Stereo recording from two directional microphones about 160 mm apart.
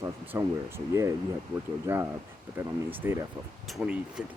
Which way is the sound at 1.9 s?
15° right (ahead or behind).